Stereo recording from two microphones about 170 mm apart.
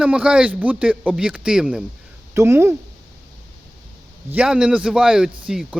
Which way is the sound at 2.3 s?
15° right (ahead or behind).